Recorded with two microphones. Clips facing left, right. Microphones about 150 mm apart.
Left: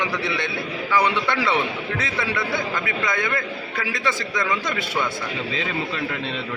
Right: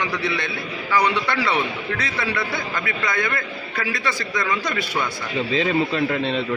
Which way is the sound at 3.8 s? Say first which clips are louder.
Right 2 dB; 20° left (ahead or behind).